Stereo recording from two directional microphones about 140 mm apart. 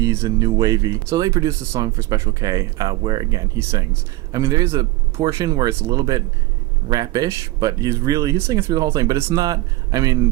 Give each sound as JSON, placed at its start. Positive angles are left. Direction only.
{"t": 0.0, "sound": "speech", "side_deg": -20}